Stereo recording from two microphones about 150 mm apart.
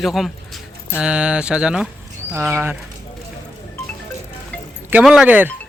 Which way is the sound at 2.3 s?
15° right (ahead or behind).